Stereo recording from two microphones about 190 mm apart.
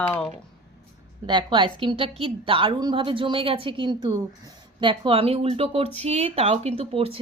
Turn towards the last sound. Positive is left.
turn(degrees=-30)  # may be behind; listen again after turning